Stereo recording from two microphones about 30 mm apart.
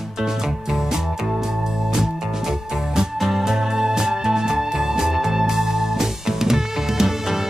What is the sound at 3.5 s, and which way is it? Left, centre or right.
Music, centre.